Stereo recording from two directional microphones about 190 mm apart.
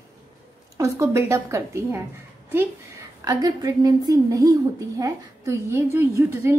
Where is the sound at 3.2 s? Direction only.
20° right (ahead or behind).